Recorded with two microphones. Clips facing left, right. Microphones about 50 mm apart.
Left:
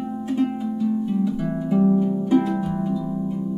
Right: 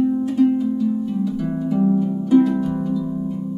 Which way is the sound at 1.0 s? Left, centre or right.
Centre.